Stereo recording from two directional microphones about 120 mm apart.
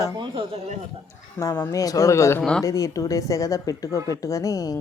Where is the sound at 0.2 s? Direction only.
45° right (ahead or behind).